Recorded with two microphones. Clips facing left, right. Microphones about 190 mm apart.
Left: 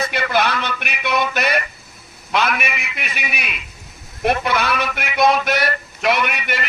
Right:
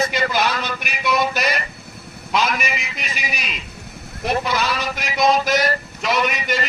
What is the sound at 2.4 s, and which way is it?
A man's voice, 60° left (ahead or behind).